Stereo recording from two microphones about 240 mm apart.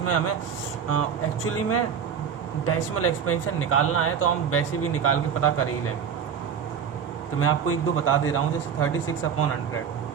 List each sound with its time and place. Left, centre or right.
0.0 s speech: left
1.5 s speech: left
7.3 s speech: left